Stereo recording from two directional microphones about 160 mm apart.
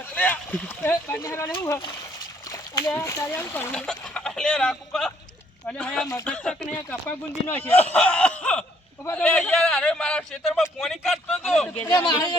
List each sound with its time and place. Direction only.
0.1 s speech: 10° left (ahead or behind)
2.5 s splash: 20° left (ahead or behind)
2.9 s a man's voice: 20° left (ahead or behind); by 11.7 s centre (ahead or behind)
11.9 s speech: 20° left (ahead or behind)